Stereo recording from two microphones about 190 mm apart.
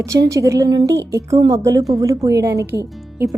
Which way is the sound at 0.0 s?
15° right (ahead or behind).